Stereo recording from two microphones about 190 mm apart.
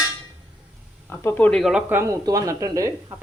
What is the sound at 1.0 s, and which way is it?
Speech, 10° left (ahead or behind).